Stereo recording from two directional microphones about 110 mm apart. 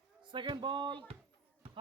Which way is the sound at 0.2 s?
45° right (ahead or behind).